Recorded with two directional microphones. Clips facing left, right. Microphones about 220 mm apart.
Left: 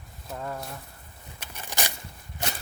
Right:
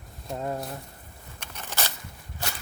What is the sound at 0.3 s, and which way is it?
Speech, 25° right (ahead or behind).